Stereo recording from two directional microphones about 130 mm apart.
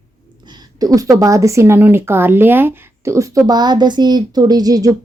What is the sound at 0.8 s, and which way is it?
Speech, 30° right (ahead or behind).